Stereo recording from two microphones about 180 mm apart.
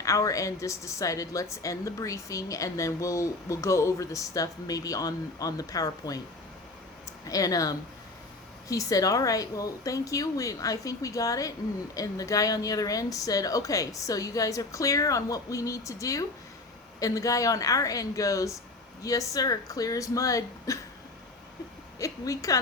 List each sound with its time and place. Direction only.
0.0 s a woman's voice: 20° left (ahead or behind)
7.3 s a woman's voice: 20° left (ahead or behind)
21.9 s a woman's voice: 20° left (ahead or behind)